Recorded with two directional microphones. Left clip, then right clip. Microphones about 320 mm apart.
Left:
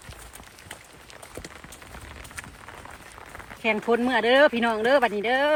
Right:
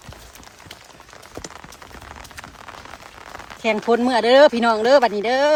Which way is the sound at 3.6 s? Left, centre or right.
Centre.